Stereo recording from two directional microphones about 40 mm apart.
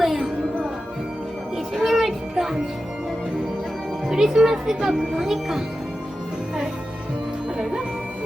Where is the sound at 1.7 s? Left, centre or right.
Centre.